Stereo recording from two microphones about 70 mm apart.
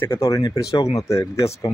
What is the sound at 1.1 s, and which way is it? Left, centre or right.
Speech, left.